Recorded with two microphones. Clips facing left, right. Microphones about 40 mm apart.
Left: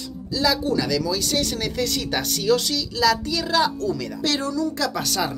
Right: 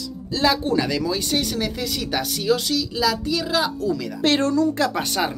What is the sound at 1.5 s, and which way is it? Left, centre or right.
A woman's voice, centre.